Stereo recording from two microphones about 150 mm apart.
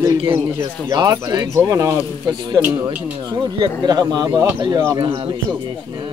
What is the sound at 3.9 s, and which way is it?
Speech, 25° right (ahead or behind).